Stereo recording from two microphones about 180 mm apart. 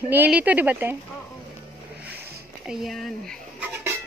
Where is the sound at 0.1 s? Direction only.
10° right (ahead or behind).